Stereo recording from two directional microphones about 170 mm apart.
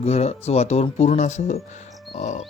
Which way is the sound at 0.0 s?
40° left (ahead or behind).